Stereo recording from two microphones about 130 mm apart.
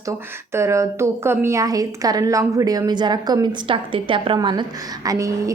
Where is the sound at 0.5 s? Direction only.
20° right (ahead or behind).